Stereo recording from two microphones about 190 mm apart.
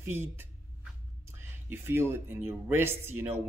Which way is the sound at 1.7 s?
10° right (ahead or behind).